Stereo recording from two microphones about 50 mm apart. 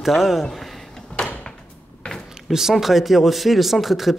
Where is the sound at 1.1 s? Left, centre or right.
Left.